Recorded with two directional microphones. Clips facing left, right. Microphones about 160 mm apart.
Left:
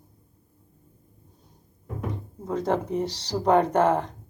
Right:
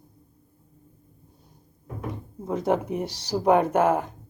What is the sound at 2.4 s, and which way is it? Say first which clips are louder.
Speech: right 1 dB; 10° right (ahead or behind).